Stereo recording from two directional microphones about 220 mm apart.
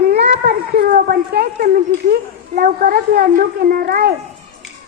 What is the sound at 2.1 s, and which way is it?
A child's voice, 40° right (ahead or behind).